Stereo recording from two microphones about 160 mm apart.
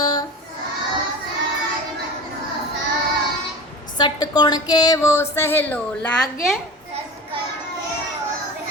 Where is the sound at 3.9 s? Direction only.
25° left (ahead or behind); by 6.3 s 10° left (ahead or behind).